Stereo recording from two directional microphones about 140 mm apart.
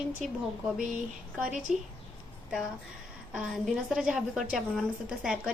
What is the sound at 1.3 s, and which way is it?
Speech, 10° right (ahead or behind).